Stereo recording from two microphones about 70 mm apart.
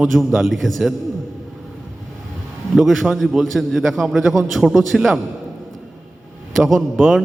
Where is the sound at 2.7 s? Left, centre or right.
Centre.